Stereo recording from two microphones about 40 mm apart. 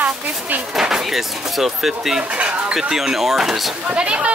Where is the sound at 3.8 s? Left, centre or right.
Right.